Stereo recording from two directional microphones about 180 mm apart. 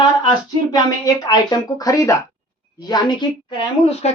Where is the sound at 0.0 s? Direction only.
25° left (ahead or behind).